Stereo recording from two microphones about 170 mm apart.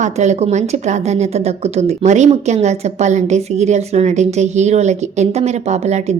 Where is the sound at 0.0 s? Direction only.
45° right (ahead or behind).